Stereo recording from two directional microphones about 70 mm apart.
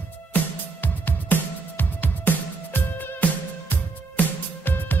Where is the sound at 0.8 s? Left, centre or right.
Left.